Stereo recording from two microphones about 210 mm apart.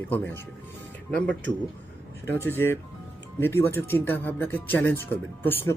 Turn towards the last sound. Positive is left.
turn(degrees=10)  # may be behind; listen again after turning